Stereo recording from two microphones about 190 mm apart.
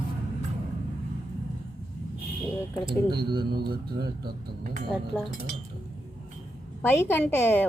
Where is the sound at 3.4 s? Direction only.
55° right (ahead or behind).